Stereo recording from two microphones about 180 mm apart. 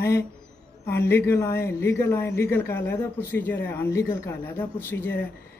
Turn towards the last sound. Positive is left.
turn(degrees=10)  # may be behind; listen again after turning